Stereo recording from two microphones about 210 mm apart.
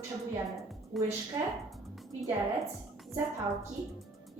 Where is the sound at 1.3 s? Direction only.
20° right (ahead or behind).